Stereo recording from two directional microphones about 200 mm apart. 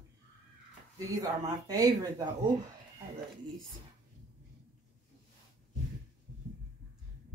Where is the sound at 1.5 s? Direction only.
20° right (ahead or behind).